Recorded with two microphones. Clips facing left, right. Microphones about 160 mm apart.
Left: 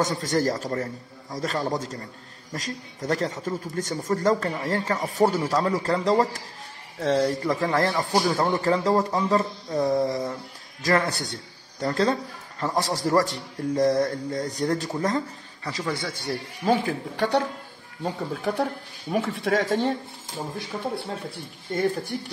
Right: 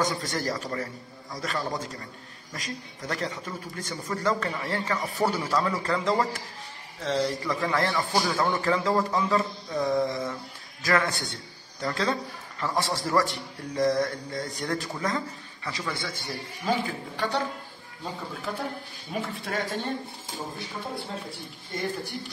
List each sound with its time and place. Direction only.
0.0 s a man's voice: 40° left (ahead or behind)
7.1 s a man's voice: 50° left (ahead or behind)
16.8 s speech: 70° left (ahead or behind); by 19.9 s 85° left